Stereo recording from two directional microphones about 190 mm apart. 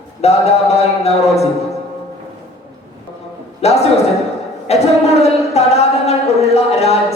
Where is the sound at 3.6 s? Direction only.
35° left (ahead or behind).